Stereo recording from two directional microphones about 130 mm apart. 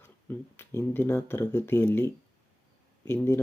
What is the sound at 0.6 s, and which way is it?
Speech, 20° left (ahead or behind).